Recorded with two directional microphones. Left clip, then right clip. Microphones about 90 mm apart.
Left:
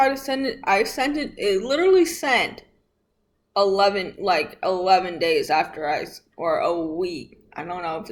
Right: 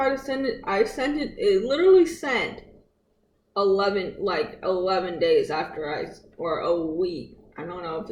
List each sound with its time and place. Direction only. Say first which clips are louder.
0.0 s a man's voice: left 4 dB; 15° left (ahead or behind)